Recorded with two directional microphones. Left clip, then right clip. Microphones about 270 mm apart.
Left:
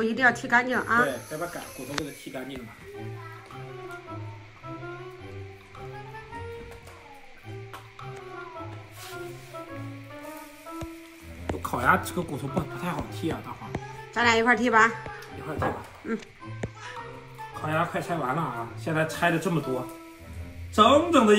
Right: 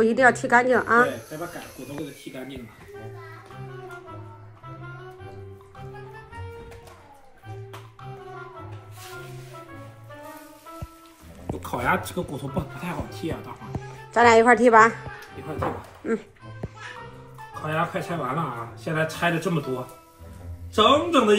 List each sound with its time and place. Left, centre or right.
0.0 s speech: centre
11.6 s a woman's voice: centre
17.6 s speech: centre
20.7 s speech: centre